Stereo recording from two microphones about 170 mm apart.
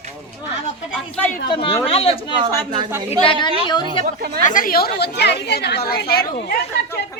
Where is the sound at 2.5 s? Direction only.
25° right (ahead or behind).